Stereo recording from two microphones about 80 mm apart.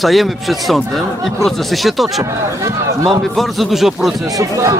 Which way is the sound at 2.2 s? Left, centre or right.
Right.